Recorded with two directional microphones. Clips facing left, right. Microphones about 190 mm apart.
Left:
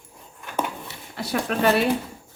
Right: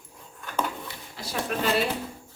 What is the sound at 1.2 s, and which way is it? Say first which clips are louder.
Speech: left 5 dB; 65° left (ahead or behind).